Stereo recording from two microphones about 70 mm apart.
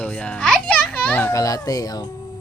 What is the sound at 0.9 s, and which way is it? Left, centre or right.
Children playing, left.